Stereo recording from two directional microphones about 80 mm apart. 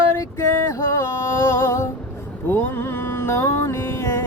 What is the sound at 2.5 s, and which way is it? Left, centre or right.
Mantra, left.